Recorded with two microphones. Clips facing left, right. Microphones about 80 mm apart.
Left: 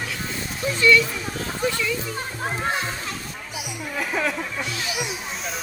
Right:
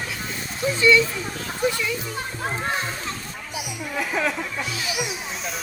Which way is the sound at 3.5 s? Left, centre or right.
Centre.